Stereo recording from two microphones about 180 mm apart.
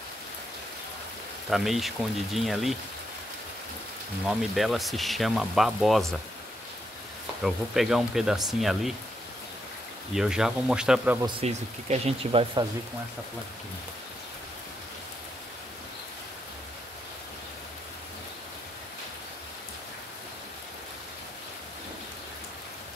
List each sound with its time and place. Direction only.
1.5 s speech: centre (ahead or behind)
4.3 s speech: centre (ahead or behind)
7.4 s speech: centre (ahead or behind)
10.1 s speech: 5° right (ahead or behind)
11.4 s speech: 35° right (ahead or behind)